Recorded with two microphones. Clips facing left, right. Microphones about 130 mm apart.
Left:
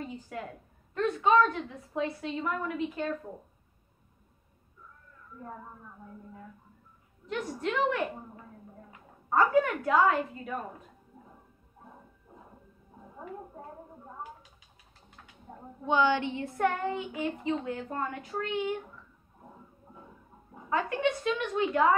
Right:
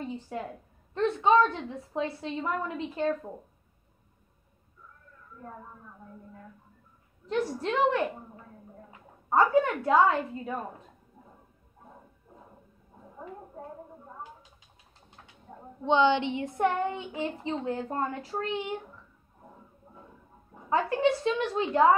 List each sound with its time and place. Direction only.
0.0 s a sound: 25° right (ahead or behind)
0.9 s a woman's voice: 30° right (ahead or behind)
7.2 s a woman's voice: 30° right (ahead or behind)
9.3 s a woman's voice: 25° right (ahead or behind)
15.8 s a woman's voice: 25° right (ahead or behind)
20.7 s a woman's voice: 30° right (ahead or behind)